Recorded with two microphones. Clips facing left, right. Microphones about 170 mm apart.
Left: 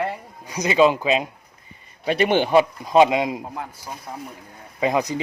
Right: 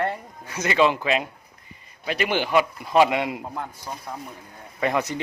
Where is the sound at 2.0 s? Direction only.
30° left (ahead or behind); by 3.4 s 15° left (ahead or behind).